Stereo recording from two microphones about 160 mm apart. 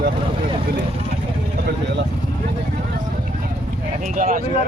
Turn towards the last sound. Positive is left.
turn(degrees=-55)  # may be behind; listen again after turning